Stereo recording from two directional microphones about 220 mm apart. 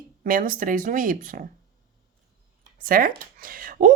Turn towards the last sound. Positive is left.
turn(degrees=-40)  # may be behind; listen again after turning